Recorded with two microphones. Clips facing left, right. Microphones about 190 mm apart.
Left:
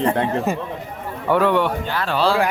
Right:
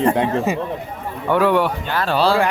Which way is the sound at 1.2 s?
5° right (ahead or behind).